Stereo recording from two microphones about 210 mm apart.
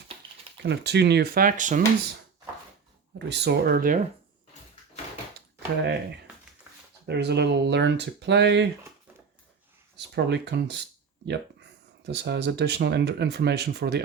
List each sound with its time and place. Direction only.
0.5 s speech: 55° right (ahead or behind); by 1.8 s 40° right (ahead or behind)
3.2 s speech: 55° right (ahead or behind)
7.1 s speech: 55° right (ahead or behind)
10.2 s speech: 55° right (ahead or behind)